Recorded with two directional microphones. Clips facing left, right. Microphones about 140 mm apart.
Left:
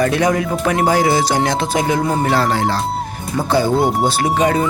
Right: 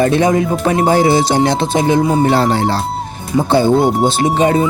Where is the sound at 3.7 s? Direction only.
Centre (ahead or behind).